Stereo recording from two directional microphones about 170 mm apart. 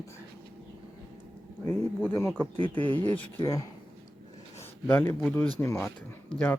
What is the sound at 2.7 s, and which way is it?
Speech, 30° right (ahead or behind).